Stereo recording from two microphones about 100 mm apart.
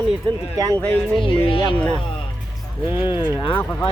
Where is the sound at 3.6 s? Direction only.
15° left (ahead or behind).